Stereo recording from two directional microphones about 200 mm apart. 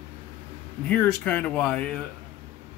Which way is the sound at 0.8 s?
5° left (ahead or behind).